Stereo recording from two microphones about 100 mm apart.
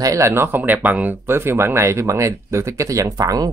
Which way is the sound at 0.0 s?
30° right (ahead or behind).